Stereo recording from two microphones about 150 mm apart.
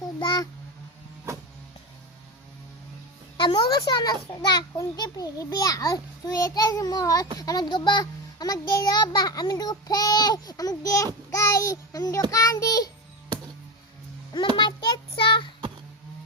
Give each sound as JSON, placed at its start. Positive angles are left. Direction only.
{"t": 0.2, "sound": "a sound", "side_deg": 30}
{"t": 3.3, "sound": "a child's voice", "side_deg": 30}
{"t": 14.5, "sound": "child singing", "side_deg": 30}